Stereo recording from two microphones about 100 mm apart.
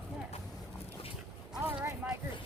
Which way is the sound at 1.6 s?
15° right (ahead or behind).